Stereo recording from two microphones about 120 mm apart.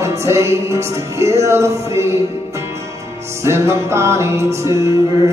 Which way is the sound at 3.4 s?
25° right (ahead or behind).